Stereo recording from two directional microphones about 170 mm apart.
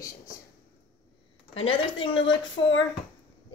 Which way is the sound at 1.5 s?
30° left (ahead or behind).